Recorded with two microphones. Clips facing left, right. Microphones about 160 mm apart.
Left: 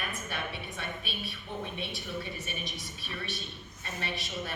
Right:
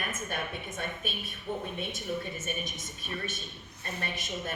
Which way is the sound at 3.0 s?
50° right (ahead or behind).